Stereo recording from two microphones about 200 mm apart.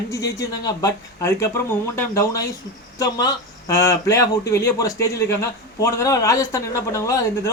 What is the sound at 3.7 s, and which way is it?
A man's voice, 15° left (ahead or behind).